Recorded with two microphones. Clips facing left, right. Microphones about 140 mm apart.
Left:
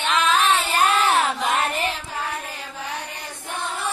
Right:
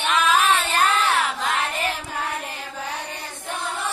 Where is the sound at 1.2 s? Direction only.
20° left (ahead or behind).